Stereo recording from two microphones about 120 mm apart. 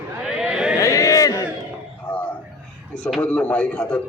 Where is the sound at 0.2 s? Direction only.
5° right (ahead or behind).